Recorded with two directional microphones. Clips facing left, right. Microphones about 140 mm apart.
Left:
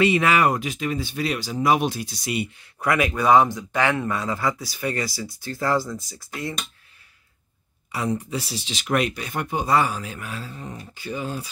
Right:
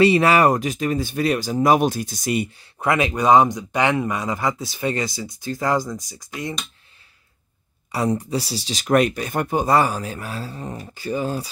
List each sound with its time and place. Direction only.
0.0 s speech: 35° right (ahead or behind)
2.6 s speech: 25° right (ahead or behind)
7.9 s speech: 35° right (ahead or behind)